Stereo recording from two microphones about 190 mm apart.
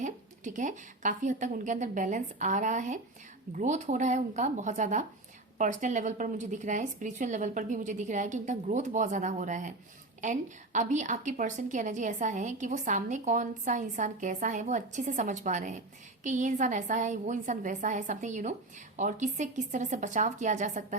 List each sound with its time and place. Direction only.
0.0 s a woman's voice: 40° right (ahead or behind)